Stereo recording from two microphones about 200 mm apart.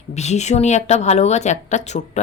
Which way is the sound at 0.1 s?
35° left (ahead or behind).